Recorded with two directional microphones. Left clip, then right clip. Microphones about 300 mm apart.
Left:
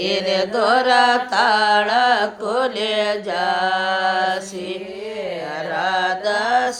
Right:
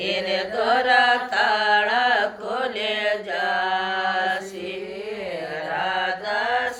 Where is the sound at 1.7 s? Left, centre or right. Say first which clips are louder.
Left 3 dB; centre.